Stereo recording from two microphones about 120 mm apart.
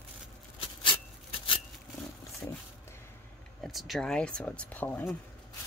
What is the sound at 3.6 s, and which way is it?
Speech, centre (ahead or behind).